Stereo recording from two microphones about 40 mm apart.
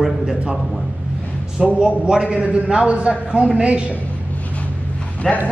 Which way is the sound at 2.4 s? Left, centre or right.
Right.